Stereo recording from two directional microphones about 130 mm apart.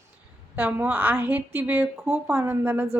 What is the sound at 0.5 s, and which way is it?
A woman's voice, 15° right (ahead or behind).